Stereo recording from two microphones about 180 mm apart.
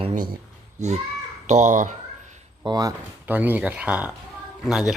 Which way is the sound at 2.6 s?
20° right (ahead or behind).